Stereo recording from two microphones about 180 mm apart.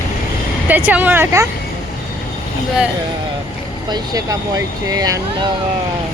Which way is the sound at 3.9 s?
20° right (ahead or behind).